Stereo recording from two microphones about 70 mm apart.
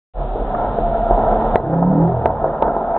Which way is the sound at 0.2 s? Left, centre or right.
Centre.